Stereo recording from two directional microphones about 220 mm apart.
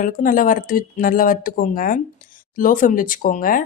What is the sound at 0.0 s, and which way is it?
Speech, 40° left (ahead or behind).